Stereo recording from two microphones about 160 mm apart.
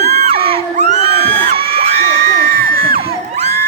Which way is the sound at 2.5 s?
70° right (ahead or behind).